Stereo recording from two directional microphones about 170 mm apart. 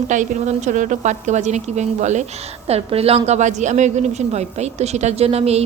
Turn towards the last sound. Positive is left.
turn(degrees=-35)  # may be behind; listen again after turning